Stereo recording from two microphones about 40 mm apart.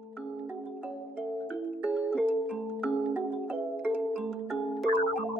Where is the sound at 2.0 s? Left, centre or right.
Right.